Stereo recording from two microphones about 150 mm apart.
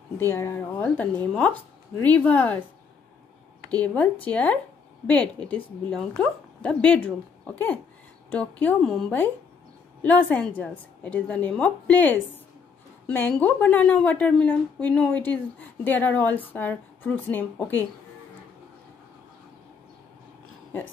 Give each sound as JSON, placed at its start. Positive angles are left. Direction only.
{"t": 0.2, "sound": "a woman's voice", "side_deg": 15}
{"t": 3.7, "sound": "a woman's voice", "side_deg": 10}